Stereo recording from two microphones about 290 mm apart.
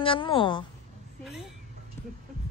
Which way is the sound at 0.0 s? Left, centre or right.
Centre.